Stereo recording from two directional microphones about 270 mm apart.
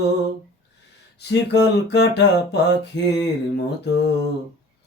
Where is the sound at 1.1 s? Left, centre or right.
Left.